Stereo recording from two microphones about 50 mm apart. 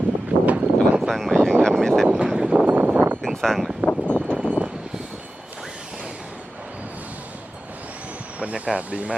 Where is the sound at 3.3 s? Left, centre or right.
Centre.